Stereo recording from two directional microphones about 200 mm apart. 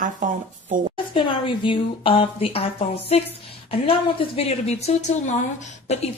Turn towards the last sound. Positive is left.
turn(degrees=35)  # may be behind; listen again after turning